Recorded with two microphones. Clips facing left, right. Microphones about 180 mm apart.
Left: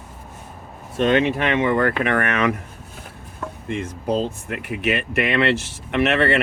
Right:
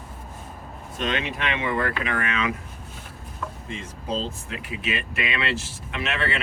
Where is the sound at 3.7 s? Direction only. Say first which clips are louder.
Left 8 dB; 60° left (ahead or behind).